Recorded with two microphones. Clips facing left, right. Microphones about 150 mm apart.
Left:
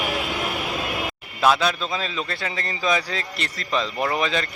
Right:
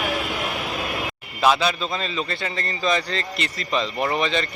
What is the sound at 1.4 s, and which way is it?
A man's voice, centre (ahead or behind).